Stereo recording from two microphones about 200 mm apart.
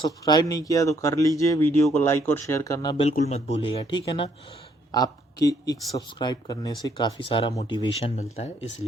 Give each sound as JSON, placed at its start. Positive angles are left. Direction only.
{"t": 0.3, "sound": "speech", "side_deg": 20}
{"t": 3.0, "sound": "speech", "side_deg": 30}